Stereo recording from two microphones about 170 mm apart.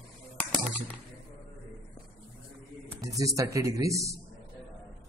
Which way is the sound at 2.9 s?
20° right (ahead or behind).